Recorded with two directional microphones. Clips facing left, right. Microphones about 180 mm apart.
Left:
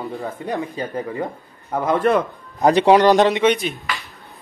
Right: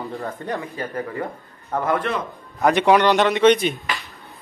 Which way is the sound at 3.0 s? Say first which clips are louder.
Left 4 dB; 40° left (ahead or behind).